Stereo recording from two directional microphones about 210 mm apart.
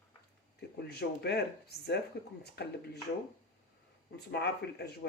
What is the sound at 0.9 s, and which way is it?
Speech, 50° left (ahead or behind).